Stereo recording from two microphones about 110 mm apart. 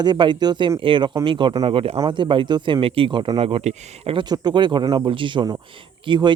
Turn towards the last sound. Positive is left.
turn(degrees=-45)  # may be behind; listen again after turning